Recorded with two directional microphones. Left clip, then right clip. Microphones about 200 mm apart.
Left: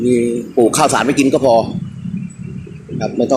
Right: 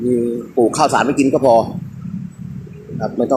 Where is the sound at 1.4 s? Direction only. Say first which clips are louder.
Right 1 dB; 10° right (ahead or behind).